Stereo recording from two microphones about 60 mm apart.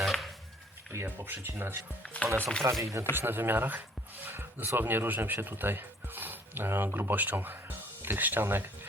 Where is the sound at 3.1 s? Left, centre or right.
Right.